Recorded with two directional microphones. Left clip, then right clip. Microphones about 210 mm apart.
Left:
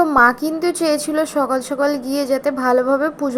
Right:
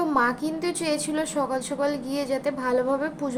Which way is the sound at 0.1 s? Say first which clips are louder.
Left 10 dB; 20° left (ahead or behind).